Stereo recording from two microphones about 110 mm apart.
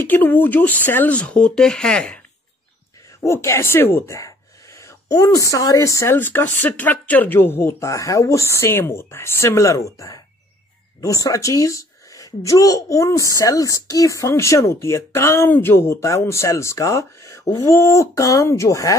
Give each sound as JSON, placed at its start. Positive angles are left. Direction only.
{"t": 0.0, "sound": "speech", "side_deg": 20}
{"t": 3.3, "sound": "a woman's voice", "side_deg": 25}